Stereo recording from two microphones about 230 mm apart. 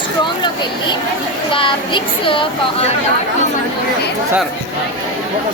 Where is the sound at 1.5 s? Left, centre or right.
Left.